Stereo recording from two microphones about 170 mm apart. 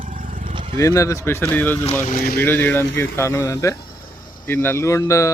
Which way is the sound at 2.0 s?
50° left (ahead or behind).